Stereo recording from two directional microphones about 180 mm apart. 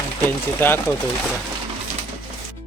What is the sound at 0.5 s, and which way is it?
Speech, 10° left (ahead or behind).